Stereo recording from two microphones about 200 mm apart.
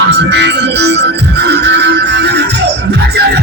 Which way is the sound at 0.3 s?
60° right (ahead or behind).